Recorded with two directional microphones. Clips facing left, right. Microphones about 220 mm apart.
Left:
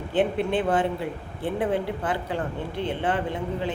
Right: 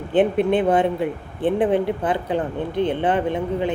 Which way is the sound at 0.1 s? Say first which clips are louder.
Right 6 dB; 20° right (ahead or behind).